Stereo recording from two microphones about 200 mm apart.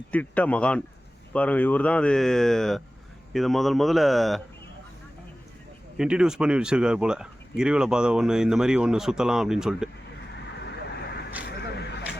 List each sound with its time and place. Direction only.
0.1 s speech: 5° left (ahead or behind)
6.0 s speech: 5° right (ahead or behind)
10.6 s vehicle: 55° left (ahead or behind)
11.8 s a sound: 55° left (ahead or behind)